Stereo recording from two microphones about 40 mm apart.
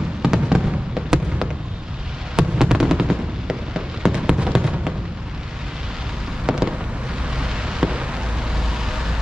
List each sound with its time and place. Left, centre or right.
0.2 s fireworks: centre
2.3 s fireworks: centre
6.4 s fireworks: centre
7.3 s vehicle: centre